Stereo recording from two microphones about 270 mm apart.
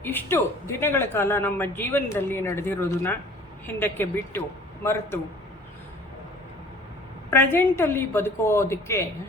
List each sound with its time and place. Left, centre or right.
0.0 s speech: centre
7.3 s speech: centre